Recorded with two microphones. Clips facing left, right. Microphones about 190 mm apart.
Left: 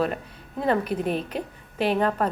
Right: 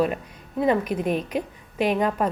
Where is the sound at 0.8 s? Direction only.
35° left (ahead or behind).